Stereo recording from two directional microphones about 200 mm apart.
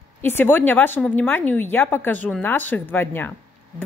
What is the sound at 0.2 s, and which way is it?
A woman's voice, 10° left (ahead or behind).